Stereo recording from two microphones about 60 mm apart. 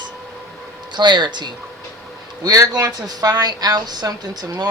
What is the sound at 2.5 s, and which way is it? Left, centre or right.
A woman's voice, right.